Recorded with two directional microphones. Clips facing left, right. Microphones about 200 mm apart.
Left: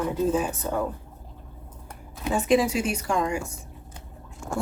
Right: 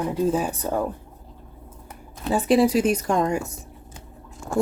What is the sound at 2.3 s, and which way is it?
A woman's voice, 35° right (ahead or behind).